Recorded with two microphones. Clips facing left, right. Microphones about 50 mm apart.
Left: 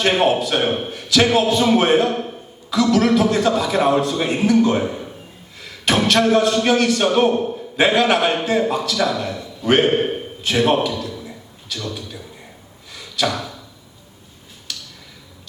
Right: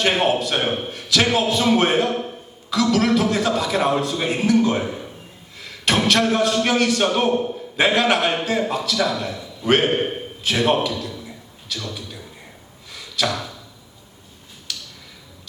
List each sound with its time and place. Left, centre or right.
0.0 s a man's voice: centre
12.9 s a sound: centre
14.7 s tick-tock: centre